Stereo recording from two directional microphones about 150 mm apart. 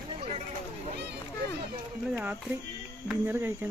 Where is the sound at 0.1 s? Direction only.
45° right (ahead or behind).